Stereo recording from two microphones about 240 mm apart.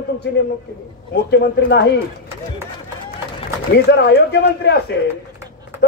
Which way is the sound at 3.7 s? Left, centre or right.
Left.